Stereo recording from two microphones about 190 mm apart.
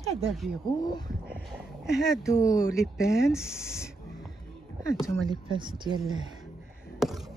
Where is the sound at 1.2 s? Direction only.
5° right (ahead or behind).